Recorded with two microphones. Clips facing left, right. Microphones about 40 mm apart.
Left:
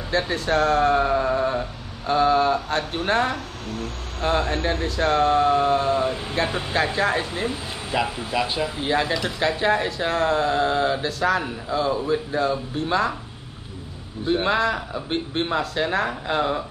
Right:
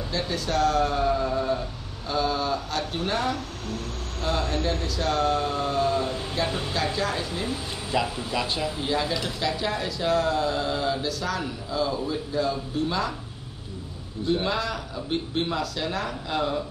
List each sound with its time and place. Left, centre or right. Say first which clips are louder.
0.1 s speech: left 6 dB; left
6.7 s speech: left 5 dB; left; by 8.8 s centre
8.8 s speech: left 5 dB; left
9.4 s speech: left 9 dB; left
14.2 s speech: left 5 dB; left